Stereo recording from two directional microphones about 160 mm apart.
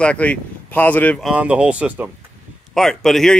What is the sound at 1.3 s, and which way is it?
Speech, 5° right (ahead or behind).